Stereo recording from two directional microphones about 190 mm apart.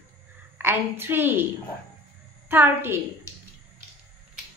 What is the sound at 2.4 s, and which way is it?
Speech, 10° right (ahead or behind).